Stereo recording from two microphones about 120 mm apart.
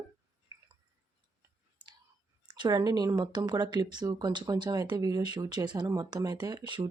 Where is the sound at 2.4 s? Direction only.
40° right (ahead or behind).